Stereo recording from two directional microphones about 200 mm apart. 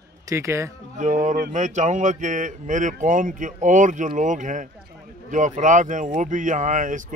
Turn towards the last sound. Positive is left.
turn(degrees=-40)  # may be behind; listen again after turning